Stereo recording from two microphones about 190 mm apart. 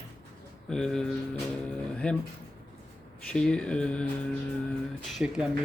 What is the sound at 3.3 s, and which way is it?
Speech, 5° left (ahead or behind).